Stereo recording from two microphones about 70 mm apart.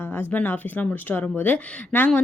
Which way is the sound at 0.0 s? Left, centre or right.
Left.